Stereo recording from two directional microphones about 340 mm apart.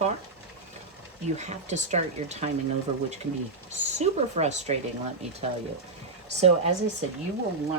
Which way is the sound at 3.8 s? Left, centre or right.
Centre.